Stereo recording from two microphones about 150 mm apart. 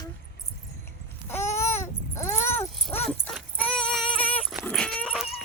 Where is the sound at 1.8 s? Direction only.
20° left (ahead or behind).